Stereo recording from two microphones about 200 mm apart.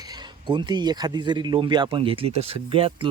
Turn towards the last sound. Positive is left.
turn(degrees=-30)  # may be behind; listen again after turning